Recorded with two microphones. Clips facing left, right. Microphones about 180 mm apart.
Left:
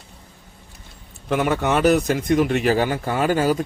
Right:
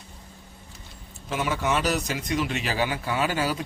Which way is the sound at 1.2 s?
60° left (ahead or behind).